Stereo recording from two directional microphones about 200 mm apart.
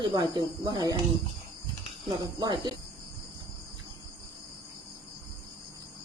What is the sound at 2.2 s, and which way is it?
Speech, 20° right (ahead or behind).